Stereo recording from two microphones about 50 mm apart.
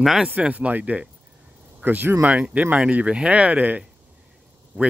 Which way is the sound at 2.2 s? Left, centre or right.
Right.